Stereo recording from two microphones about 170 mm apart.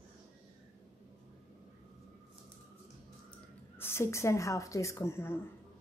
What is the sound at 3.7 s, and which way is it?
A woman's voice, 15° left (ahead or behind).